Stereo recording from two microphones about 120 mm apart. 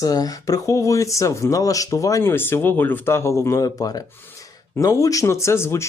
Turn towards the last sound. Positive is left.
turn(degrees=20)  # may be behind; listen again after turning